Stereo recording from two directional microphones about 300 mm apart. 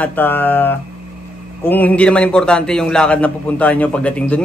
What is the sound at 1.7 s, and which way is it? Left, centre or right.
A man's voice, centre.